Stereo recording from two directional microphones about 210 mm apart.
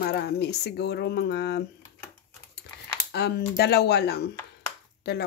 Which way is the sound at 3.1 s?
50° left (ahead or behind).